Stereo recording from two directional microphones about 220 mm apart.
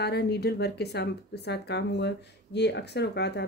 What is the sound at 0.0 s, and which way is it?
Speech, 45° left (ahead or behind).